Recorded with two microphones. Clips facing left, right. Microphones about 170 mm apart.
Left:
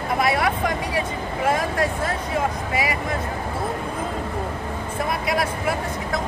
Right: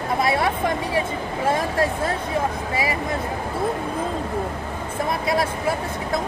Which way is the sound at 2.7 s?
30° right (ahead or behind).